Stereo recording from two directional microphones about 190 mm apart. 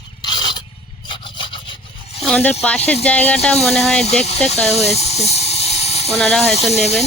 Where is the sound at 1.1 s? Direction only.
25° left (ahead or behind).